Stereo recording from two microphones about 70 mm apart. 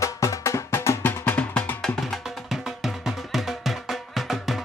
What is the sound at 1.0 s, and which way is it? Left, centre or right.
Music, left.